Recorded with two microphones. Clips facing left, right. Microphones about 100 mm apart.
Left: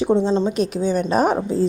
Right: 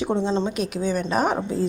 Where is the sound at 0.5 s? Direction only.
30° left (ahead or behind).